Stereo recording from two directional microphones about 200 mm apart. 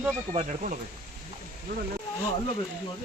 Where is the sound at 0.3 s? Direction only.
35° right (ahead or behind).